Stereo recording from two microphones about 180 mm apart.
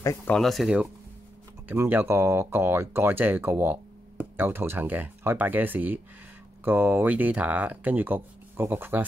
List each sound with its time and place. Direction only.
0.0 s speech: 20° left (ahead or behind)
0.3 s speech: centre (ahead or behind)